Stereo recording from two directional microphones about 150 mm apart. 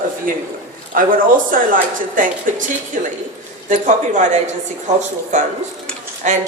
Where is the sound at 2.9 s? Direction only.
60° right (ahead or behind).